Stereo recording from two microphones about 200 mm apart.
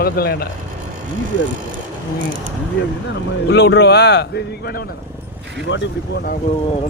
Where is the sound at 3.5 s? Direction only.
60° left (ahead or behind).